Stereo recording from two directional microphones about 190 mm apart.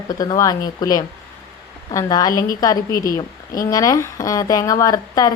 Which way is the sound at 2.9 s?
50° left (ahead or behind).